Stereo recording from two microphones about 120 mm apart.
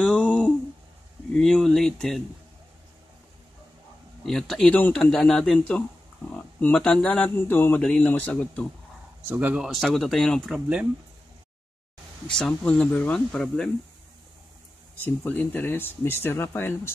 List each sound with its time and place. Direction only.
0.0 s a sound: 10° left (ahead or behind)
1.3 s speech: 5° left (ahead or behind)
4.3 s speech: 5° left (ahead or behind)
7.2 s speech: 15° left (ahead or behind)
9.3 s speech: 15° right (ahead or behind)
9.7 s speech: centre (ahead or behind)
12.3 s speech: 5° left (ahead or behind)
15.0 s speech: 15° left (ahead or behind)